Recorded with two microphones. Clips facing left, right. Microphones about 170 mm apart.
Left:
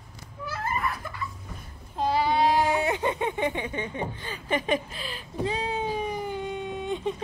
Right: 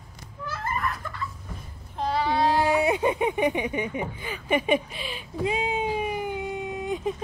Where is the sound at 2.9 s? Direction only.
15° right (ahead or behind).